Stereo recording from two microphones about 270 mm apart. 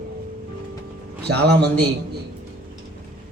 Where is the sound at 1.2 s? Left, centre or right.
Right.